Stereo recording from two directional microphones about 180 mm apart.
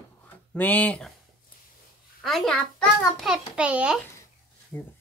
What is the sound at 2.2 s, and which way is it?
A child's voice, centre (ahead or behind).